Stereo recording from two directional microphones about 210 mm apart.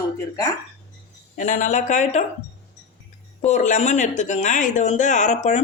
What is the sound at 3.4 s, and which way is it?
Speech, 35° left (ahead or behind).